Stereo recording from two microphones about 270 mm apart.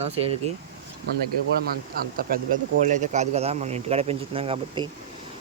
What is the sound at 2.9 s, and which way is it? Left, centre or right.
Speech, right.